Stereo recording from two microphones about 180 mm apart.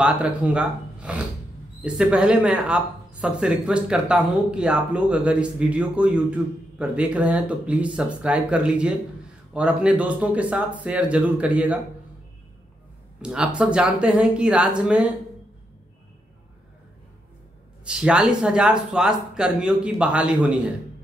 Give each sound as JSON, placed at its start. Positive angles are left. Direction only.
{"t": 0.0, "sound": "speech", "side_deg": -5}
{"t": 13.2, "sound": "speech", "side_deg": -5}
{"t": 17.8, "sound": "speech", "side_deg": -5}